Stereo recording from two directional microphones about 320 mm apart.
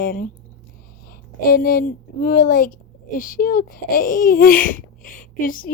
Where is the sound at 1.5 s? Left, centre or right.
Left.